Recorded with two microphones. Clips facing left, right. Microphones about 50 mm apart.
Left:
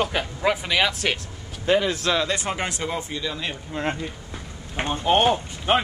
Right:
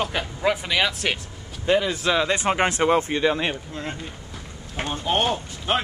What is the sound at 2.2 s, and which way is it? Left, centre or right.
Speech, right.